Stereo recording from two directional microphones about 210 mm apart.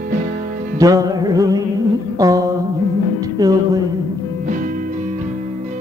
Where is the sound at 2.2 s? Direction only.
15° right (ahead or behind).